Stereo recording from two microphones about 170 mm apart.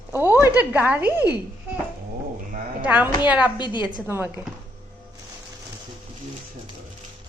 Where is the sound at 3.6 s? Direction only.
25° left (ahead or behind).